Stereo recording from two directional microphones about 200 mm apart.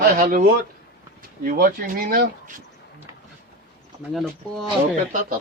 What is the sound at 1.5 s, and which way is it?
Speech, 45° right (ahead or behind).